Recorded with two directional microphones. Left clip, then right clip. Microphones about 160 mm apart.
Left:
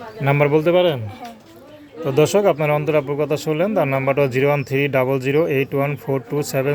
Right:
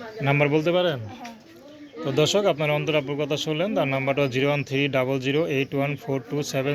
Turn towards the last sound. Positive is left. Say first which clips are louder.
# left 5 dB
turn(degrees=30)  # may be behind; listen again after turning